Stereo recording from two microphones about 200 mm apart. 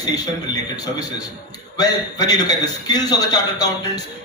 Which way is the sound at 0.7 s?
20° left (ahead or behind).